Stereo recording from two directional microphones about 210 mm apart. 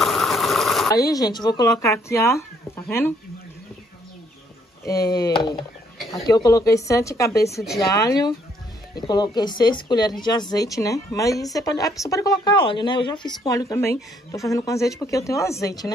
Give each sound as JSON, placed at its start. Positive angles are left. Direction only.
{"t": 0.0, "sound": "engine", "side_deg": 0}
{"t": 0.8, "sound": "speech", "side_deg": 15}
{"t": 4.8, "sound": "speech", "side_deg": 15}